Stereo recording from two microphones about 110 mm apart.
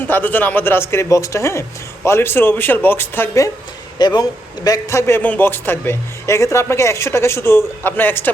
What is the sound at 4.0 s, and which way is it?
Speech, 40° left (ahead or behind).